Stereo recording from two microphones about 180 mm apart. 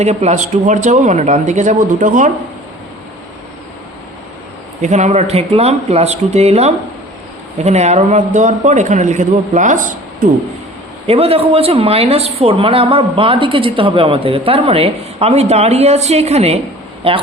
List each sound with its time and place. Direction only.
0.0 s a woman's voice: 40° right (ahead or behind)
4.8 s a woman's voice: 40° right (ahead or behind)
11.0 s a woman's voice: 35° right (ahead or behind)